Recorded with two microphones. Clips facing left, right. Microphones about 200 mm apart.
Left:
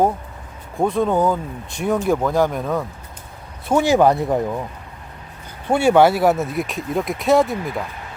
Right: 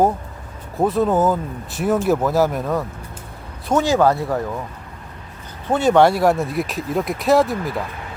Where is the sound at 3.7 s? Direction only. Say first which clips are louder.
Left 1 dB; 15° left (ahead or behind).